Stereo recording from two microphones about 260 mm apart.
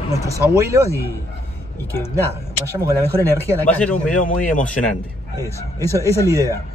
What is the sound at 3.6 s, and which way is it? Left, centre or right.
Speech, centre.